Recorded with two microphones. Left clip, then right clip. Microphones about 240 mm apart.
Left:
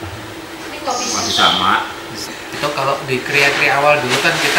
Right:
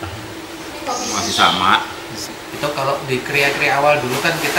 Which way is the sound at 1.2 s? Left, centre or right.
Centre.